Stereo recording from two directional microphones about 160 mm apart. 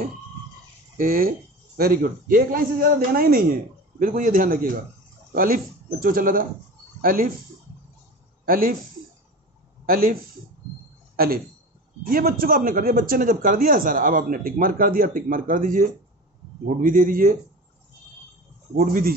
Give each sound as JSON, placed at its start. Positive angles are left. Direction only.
{"t": 0.9, "sound": "a man's voice", "side_deg": -65}
{"t": 8.5, "sound": "a man's voice", "side_deg": -65}
{"t": 9.8, "sound": "speech", "side_deg": -65}
{"t": 11.1, "sound": "a man's voice", "side_deg": -70}
{"t": 18.8, "sound": "a man's voice", "side_deg": -65}